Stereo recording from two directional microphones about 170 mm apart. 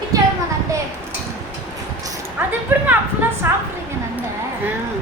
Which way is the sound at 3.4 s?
15° right (ahead or behind).